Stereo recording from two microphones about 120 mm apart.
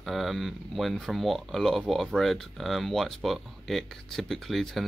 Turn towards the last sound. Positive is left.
turn(degrees=0)  # may be behind; listen again after turning